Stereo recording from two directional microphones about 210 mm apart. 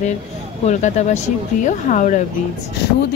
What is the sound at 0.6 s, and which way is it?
Speech, 35° left (ahead or behind).